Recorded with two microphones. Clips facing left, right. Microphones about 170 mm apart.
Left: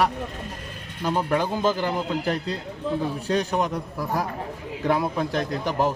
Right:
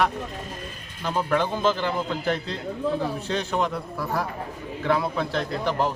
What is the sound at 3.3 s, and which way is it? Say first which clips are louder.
Speech: left 2 dB; 15° left (ahead or behind).